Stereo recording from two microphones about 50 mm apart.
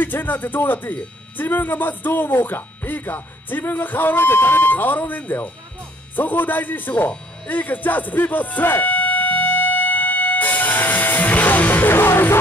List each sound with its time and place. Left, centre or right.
0.0 s speech: left
6.1 s music: left